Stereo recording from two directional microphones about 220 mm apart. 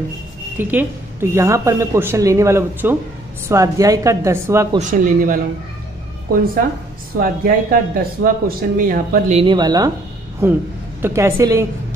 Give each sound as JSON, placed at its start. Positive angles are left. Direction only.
{"t": 0.6, "sound": "speech", "side_deg": -10}
{"t": 4.7, "sound": "speech", "side_deg": -35}
{"t": 7.2, "sound": "speech", "side_deg": -40}
{"t": 9.4, "sound": "speech", "side_deg": -20}